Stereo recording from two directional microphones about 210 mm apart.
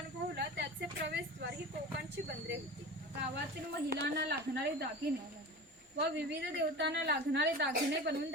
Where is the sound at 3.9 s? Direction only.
50° right (ahead or behind).